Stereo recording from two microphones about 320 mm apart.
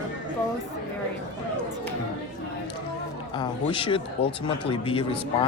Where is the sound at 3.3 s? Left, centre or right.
Centre.